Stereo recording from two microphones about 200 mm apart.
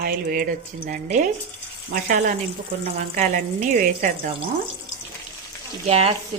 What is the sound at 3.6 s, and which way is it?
Speech, 45° right (ahead or behind).